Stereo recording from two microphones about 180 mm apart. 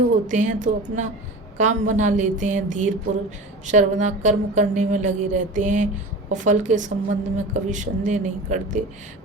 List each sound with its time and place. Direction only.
0.3 s speech: 45° right (ahead or behind)